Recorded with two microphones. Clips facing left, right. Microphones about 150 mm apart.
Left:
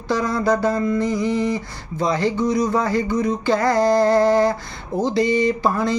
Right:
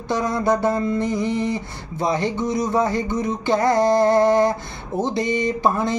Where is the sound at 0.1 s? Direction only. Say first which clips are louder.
Left 1 dB; 20° right (ahead or behind).